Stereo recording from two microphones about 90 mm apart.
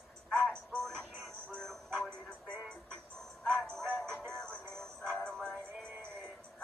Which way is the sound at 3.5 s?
20° right (ahead or behind).